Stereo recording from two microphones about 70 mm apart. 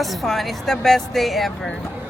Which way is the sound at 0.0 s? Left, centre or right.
Centre.